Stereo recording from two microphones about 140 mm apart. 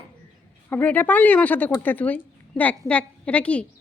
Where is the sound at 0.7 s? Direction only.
15° left (ahead or behind).